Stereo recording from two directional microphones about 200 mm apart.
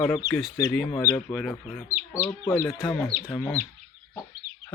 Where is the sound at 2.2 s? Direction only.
15° left (ahead or behind).